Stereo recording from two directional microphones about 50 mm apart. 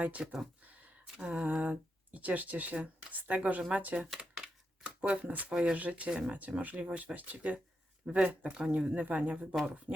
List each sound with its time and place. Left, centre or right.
0.0 s speech: right
0.6 s a sound: right
1.1 s speech: right
4.9 s speech: right
5.5 s speech: centre
5.7 s speech: right
6.6 s speech: right
8.5 s speech: centre
9.0 s speech: right